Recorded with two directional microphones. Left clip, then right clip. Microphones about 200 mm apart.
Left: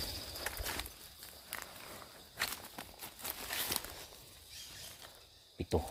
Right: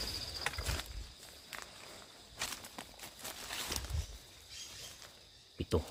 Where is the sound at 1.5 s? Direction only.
30° left (ahead or behind).